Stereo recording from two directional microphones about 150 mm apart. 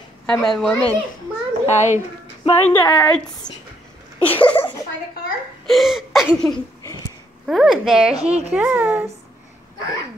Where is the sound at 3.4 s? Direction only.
30° left (ahead or behind).